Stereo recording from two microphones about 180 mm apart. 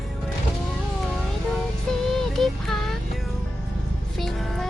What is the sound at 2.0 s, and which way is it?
Child singing, centre (ahead or behind).